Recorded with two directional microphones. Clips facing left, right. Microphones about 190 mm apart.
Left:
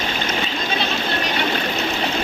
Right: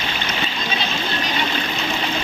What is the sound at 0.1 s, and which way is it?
Splash, 45° left (ahead or behind).